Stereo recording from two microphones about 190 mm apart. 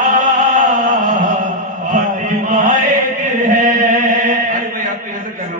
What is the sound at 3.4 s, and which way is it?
Chant, 45° right (ahead or behind).